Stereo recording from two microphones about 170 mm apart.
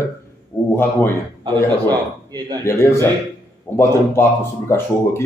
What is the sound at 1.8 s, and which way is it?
Speech, 25° right (ahead or behind).